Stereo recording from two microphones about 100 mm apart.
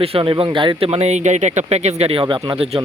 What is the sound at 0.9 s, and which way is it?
Speech, 90° right.